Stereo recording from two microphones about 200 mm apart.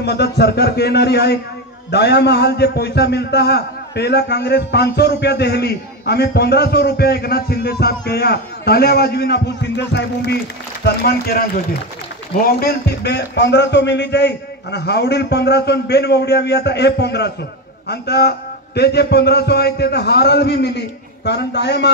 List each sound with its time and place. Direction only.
0.0 s a man's voice: 55° left (ahead or behind)